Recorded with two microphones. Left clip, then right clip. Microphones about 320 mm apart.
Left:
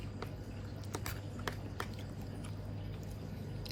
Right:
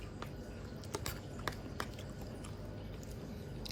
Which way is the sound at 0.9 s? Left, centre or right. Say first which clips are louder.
Right 1 dB; centre.